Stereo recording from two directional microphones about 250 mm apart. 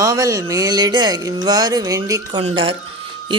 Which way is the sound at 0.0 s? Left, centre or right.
Centre.